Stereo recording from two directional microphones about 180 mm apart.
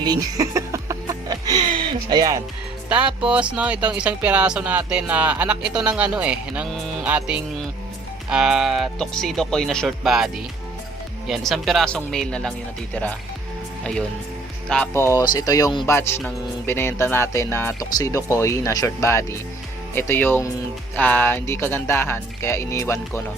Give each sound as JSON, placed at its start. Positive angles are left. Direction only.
{"t": 0.0, "sound": "music", "side_deg": -20}
{"t": 3.2, "sound": "speech", "side_deg": -5}
{"t": 14.7, "sound": "speech", "side_deg": 10}